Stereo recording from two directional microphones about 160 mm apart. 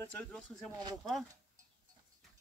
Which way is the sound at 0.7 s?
25° right (ahead or behind).